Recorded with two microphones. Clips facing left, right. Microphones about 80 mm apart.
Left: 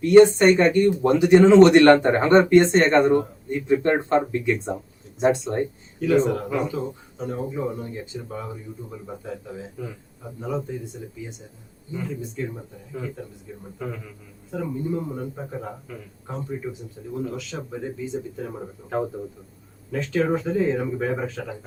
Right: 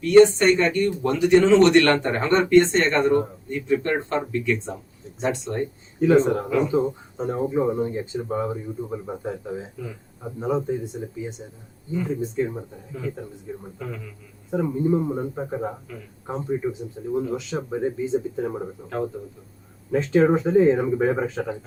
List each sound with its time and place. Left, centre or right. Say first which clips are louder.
0.0 s speech: left 1 dB; centre
6.0 s speech: right 3 dB; right
13.7 s a man's voice: left 5 dB; centre
14.5 s speech: right 5 dB; right
19.9 s speech: right 5 dB; right